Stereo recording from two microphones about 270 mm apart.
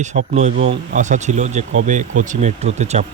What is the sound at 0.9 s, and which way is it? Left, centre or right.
Speech, right.